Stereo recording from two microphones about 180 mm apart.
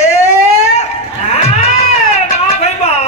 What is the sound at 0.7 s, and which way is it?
Cat, 35° left (ahead or behind).